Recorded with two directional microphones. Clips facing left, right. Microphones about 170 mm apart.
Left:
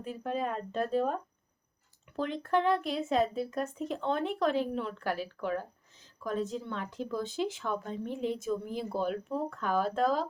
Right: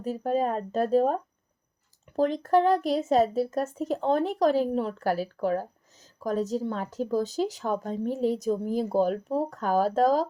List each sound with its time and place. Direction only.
0.0 s a woman's voice: 40° right (ahead or behind)